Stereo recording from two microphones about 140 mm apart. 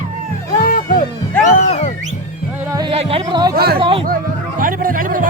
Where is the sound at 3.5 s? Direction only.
90° right.